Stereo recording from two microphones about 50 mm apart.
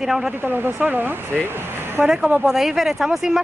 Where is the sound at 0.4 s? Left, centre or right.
Right.